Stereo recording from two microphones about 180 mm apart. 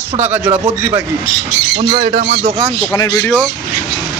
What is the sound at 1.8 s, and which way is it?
Speech, 35° right (ahead or behind).